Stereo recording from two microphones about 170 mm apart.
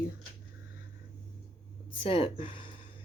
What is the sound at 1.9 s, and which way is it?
Speech, 30° left (ahead or behind).